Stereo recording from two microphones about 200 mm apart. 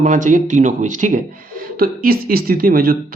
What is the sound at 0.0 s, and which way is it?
Speech, 40° right (ahead or behind).